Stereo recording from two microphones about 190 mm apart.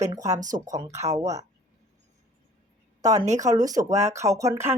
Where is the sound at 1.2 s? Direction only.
20° right (ahead or behind).